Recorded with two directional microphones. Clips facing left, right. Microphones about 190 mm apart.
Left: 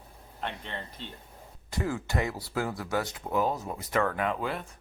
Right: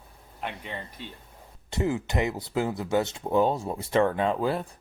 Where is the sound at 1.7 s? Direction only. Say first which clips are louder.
Right 4 dB; 20° right (ahead or behind).